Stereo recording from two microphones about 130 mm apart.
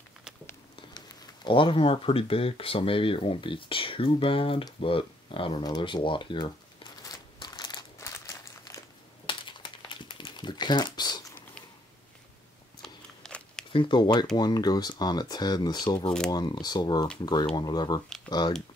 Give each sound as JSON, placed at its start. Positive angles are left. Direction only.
{"t": 0.7, "sound": "speech", "side_deg": 30}
{"t": 7.0, "sound": "crumpling", "side_deg": 30}
{"t": 8.0, "sound": "a sound", "side_deg": 25}
{"t": 9.2, "sound": "crumpling", "side_deg": 40}
{"t": 12.8, "sound": "a sound", "side_deg": 5}
{"t": 13.7, "sound": "speech", "side_deg": 40}